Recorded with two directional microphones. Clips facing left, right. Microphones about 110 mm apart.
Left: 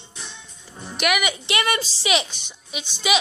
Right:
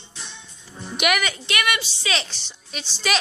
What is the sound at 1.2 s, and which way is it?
A woman's voice, 20° left (ahead or behind).